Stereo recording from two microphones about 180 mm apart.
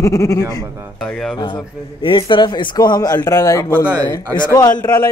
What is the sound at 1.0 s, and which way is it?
Speech, 5° left (ahead or behind).